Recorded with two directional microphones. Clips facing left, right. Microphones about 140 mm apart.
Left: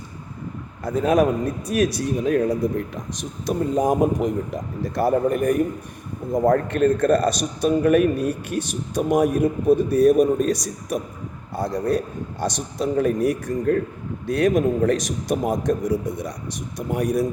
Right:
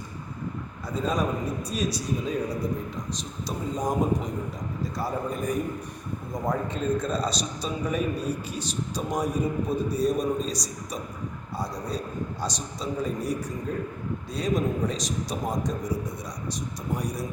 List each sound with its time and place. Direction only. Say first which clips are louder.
0.9 s a man's voice: left 9 dB; 65° left (ahead or behind)